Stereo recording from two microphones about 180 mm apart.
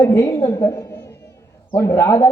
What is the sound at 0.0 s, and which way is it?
A woman's voice, 15° left (ahead or behind).